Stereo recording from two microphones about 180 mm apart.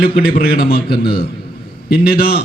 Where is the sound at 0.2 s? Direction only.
55° left (ahead or behind).